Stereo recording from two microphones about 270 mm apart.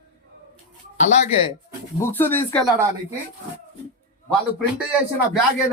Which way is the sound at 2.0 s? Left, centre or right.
Centre.